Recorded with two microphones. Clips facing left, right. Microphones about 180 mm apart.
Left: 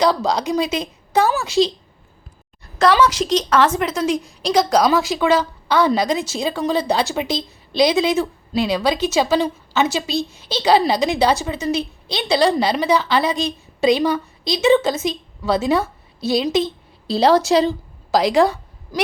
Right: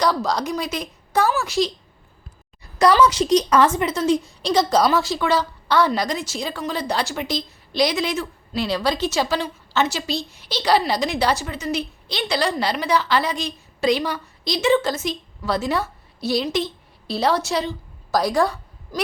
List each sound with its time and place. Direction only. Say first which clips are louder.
0.0 s a woman's voice: left 3 dB; 25° left (ahead or behind)
3.7 s speech: left 1 dB; centre (ahead or behind)
4.4 s a woman's voice: left 2 dB; 15° left (ahead or behind)
17.1 s a woman's voice: left 7 dB; 90° left
18.3 s a sound: left 5 dB; 20° left (ahead or behind)